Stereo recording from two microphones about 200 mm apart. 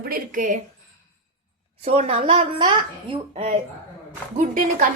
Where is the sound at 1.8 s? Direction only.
30° right (ahead or behind).